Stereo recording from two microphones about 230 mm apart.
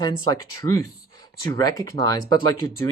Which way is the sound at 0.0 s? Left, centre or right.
Centre.